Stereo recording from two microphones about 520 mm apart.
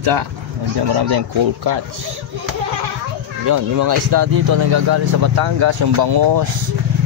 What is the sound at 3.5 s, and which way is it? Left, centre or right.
Speech, right.